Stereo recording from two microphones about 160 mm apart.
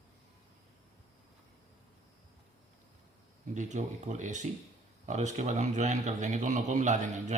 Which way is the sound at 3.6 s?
50° right (ahead or behind).